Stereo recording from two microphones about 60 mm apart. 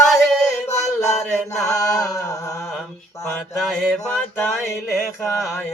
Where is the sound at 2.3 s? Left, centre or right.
Left.